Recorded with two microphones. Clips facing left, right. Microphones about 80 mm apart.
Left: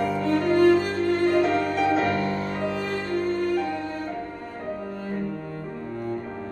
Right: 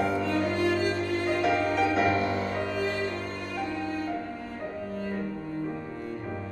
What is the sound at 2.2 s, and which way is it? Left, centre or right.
Music, left.